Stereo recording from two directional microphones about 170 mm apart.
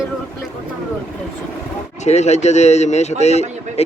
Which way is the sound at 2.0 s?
40° left (ahead or behind).